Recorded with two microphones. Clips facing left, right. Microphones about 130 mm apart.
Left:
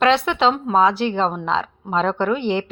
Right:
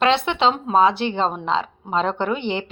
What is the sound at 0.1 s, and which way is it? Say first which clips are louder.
A woman's voice: left 1 dB; 25° right (ahead or behind).